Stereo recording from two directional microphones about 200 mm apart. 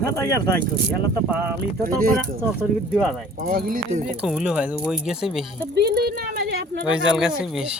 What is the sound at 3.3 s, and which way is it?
Speech, 50° right (ahead or behind).